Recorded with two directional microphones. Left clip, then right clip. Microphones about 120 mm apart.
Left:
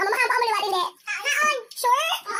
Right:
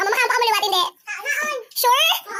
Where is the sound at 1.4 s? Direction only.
20° right (ahead or behind).